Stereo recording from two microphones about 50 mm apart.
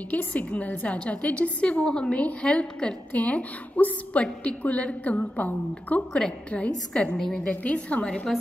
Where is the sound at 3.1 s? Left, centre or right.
Left.